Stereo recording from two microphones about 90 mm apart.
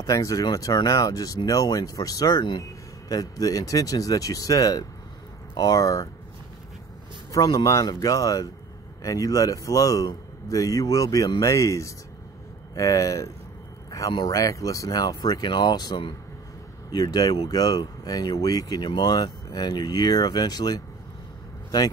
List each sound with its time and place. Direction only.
0.0 s a man's voice: 40° left (ahead or behind)
7.3 s a man's voice: 40° left (ahead or behind)